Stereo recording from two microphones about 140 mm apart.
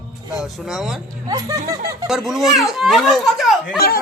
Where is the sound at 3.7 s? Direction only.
90° left.